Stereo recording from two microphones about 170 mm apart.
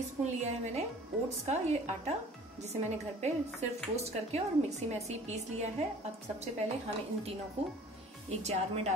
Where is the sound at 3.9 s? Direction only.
40° right (ahead or behind).